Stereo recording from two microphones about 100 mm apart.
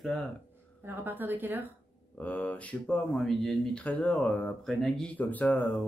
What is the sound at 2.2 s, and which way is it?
Speech, 15° left (ahead or behind).